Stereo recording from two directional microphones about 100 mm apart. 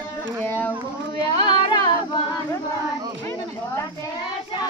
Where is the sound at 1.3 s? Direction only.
50° left (ahead or behind).